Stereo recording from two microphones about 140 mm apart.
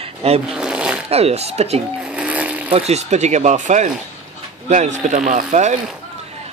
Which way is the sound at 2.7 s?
50° right (ahead or behind).